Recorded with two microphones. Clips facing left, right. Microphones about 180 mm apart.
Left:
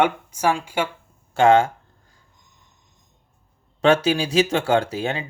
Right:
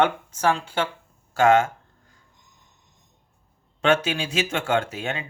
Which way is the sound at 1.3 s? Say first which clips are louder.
Left 2 dB; 30° left (ahead or behind).